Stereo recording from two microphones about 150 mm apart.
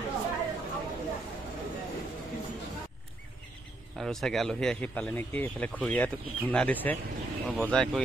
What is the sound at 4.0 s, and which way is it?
Speech, 5° left (ahead or behind).